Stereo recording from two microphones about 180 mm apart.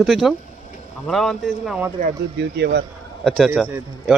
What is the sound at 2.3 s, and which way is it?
Speech, 70° right (ahead or behind).